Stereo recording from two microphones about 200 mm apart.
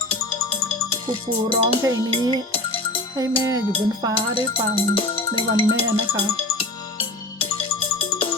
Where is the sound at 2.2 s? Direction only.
25° left (ahead or behind).